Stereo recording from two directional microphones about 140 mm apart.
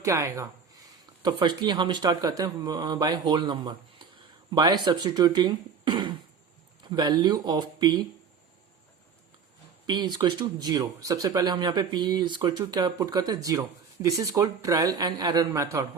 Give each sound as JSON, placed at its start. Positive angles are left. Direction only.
{"t": 0.0, "sound": "speech", "side_deg": -20}
{"t": 9.8, "sound": "speech", "side_deg": -30}